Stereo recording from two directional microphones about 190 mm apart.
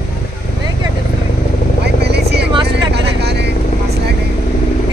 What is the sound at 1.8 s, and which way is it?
Vehicle, 60° right (ahead or behind).